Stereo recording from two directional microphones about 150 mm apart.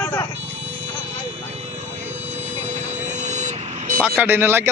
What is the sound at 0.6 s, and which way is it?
Vehicle, 40° right (ahead or behind).